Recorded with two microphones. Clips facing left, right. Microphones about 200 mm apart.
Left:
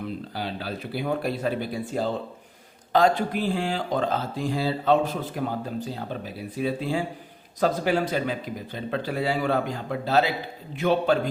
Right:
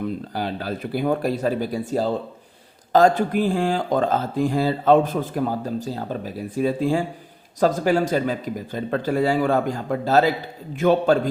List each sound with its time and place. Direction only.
0.3 s speech: 50° right (ahead or behind)